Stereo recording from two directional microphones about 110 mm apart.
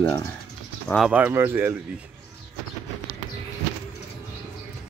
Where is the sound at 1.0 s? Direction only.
10° right (ahead or behind).